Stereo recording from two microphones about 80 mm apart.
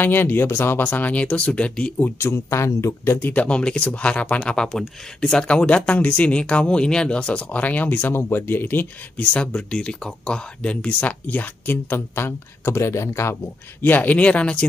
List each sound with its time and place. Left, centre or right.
0.0 s speech: left
2.1 s speech: left
3.4 s speech: centre
4.6 s speech: centre